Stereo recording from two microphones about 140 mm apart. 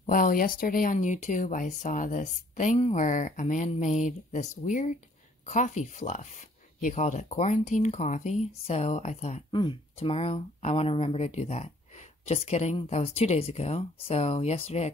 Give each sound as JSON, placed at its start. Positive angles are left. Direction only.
{"t": 0.0, "sound": "speech", "side_deg": 75}
{"t": 9.5, "sound": "speech", "side_deg": 35}